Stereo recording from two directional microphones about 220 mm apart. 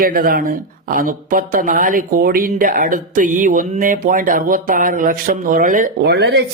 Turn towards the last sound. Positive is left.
turn(degrees=-50)  # may be behind; listen again after turning